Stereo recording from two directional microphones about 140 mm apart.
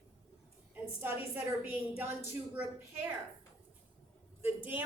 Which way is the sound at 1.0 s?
15° right (ahead or behind).